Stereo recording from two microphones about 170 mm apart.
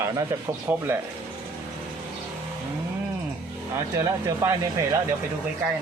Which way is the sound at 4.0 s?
15° right (ahead or behind).